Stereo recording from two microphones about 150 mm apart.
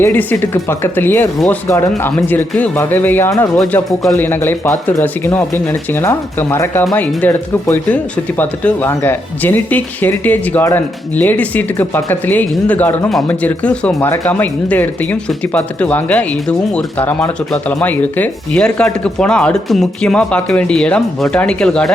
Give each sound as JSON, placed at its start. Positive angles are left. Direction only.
{"t": 0.0, "sound": "speech", "side_deg": 10}
{"t": 3.5, "sound": "speech", "side_deg": 5}